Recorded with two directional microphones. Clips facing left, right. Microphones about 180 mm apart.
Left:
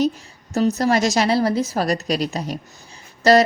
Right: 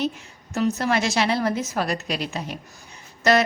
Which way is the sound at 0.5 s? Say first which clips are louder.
Left 4 dB; 35° left (ahead or behind).